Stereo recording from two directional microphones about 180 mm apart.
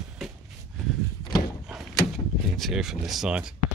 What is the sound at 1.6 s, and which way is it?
Door, centre (ahead or behind).